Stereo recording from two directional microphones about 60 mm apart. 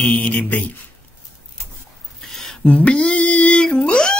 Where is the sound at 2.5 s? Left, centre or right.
Centre.